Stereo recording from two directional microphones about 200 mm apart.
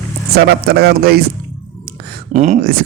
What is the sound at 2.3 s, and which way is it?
Speech, 35° right (ahead or behind).